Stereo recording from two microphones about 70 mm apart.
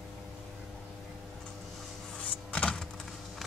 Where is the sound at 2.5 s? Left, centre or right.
Centre.